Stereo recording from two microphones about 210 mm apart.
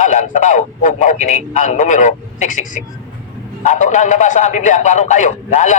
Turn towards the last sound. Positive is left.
turn(degrees=35)  # may be behind; listen again after turning